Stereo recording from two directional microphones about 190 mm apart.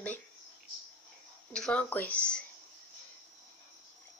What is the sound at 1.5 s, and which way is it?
Speech, 5° left (ahead or behind).